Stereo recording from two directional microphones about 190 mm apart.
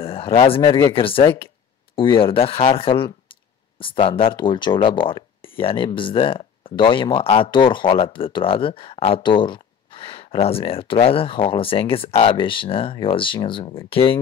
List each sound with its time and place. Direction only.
0.0 s speech: 30° left (ahead or behind)